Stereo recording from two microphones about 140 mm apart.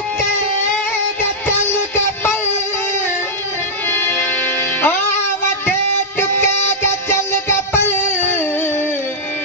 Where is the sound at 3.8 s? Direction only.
15° left (ahead or behind).